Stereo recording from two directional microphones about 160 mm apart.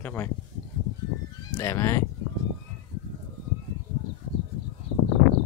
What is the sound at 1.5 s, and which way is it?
Speech, 15° left (ahead or behind).